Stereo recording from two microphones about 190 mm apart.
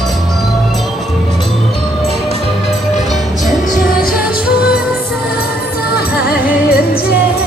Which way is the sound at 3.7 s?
50° left (ahead or behind).